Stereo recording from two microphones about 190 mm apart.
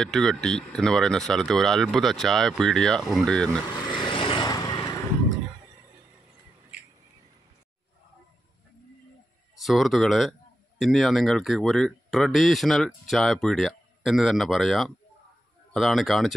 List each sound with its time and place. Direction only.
0.0 s speech: centre (ahead or behind)
4.1 s vehicle: 25° left (ahead or behind)
9.6 s speech: centre (ahead or behind)